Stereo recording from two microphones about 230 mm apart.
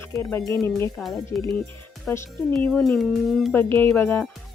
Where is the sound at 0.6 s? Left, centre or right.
Centre.